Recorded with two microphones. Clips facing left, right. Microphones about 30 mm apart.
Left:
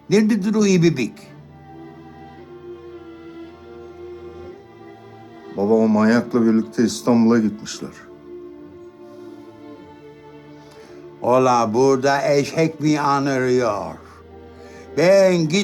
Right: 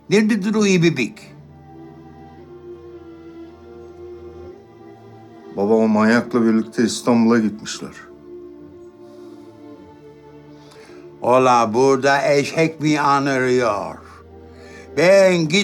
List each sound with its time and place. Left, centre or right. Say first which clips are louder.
0.1 s speech: even; centre
2.6 s music: left 1 dB; left
5.7 s speech: right 1 dB; centre
11.2 s speech: right 2 dB; centre